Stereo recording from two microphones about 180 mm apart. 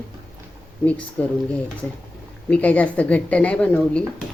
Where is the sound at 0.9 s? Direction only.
10° left (ahead or behind).